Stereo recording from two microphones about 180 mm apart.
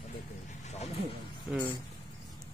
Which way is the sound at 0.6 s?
40° left (ahead or behind).